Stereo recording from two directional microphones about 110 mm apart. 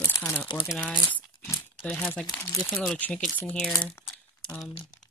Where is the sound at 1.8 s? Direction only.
15° left (ahead or behind).